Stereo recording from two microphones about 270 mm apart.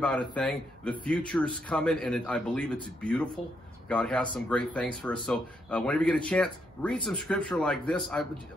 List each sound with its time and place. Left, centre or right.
0.0 s speech: centre